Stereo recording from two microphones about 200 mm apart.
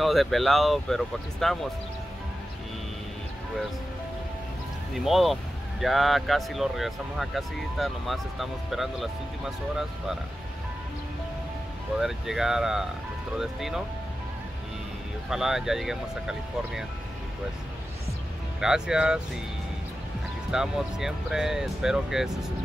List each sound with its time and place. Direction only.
0.0 s speech: centre (ahead or behind)
4.9 s speech: centre (ahead or behind)
12.0 s speech: centre (ahead or behind)
15.2 s speech: centre (ahead or behind)
18.6 s speech: 5° right (ahead or behind)
20.5 s speech: centre (ahead or behind)